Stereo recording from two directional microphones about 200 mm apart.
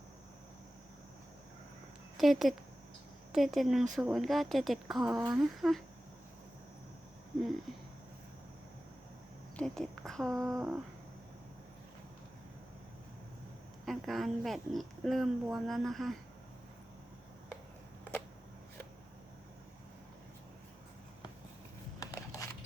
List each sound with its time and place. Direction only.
2.1 s speech: centre (ahead or behind)
9.6 s a woman's voice: 5° left (ahead or behind)
10.4 s humming: 15° right (ahead or behind)
13.8 s speech: centre (ahead or behind)
22.0 s a sound: 15° left (ahead or behind)